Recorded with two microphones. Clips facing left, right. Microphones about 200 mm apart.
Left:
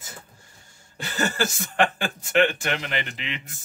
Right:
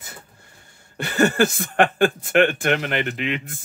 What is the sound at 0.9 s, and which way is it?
Speech, 60° right (ahead or behind).